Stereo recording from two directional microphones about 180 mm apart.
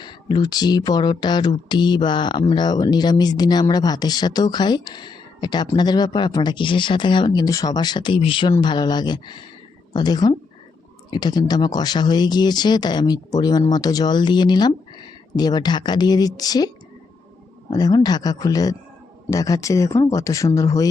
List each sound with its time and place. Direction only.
0.0 s speech: 25° left (ahead or behind)
17.7 s speech: 20° left (ahead or behind)